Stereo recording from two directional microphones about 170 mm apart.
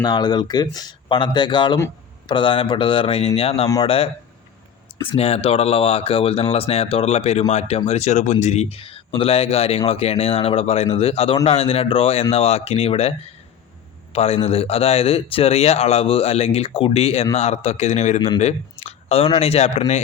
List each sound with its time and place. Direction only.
0.0 s a man's voice: 25° left (ahead or behind)